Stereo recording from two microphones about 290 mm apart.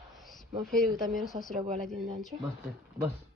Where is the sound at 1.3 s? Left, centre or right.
Centre.